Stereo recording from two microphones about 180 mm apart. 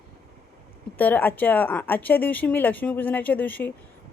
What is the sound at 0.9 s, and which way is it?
Speech, 10° left (ahead or behind).